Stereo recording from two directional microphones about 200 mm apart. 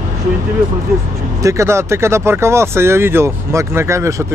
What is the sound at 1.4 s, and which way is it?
Speech, 15° right (ahead or behind).